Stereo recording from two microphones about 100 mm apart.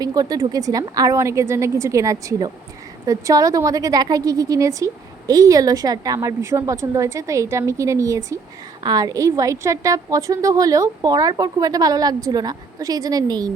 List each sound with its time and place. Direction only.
0.0 s a woman's voice: 40° right (ahead or behind)